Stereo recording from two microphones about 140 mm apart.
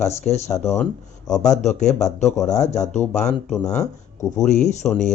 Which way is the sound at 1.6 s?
55° left (ahead or behind).